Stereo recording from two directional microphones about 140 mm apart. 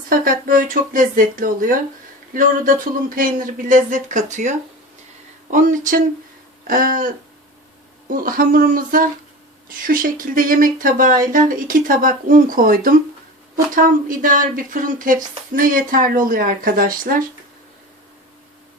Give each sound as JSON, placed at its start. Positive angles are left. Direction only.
{"t": 0.1, "sound": "speech", "side_deg": -80}
{"t": 6.7, "sound": "speech", "side_deg": -85}
{"t": 13.7, "sound": "speech", "side_deg": -80}